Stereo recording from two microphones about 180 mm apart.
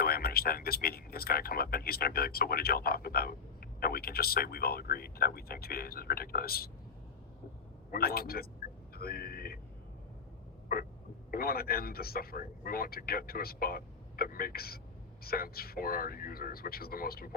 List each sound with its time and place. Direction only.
0.0 s speech: 55° left (ahead or behind)
7.9 s speech: 55° left (ahead or behind)
9.0 s a sound: 60° left (ahead or behind)
11.3 s speech: 55° left (ahead or behind)